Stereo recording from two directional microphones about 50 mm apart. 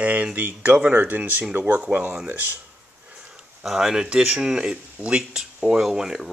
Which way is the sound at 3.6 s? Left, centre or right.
Centre.